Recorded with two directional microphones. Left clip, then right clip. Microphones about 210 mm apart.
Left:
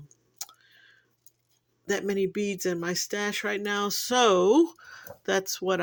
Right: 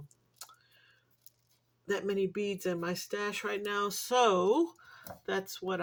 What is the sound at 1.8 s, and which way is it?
Speech, 30° left (ahead or behind).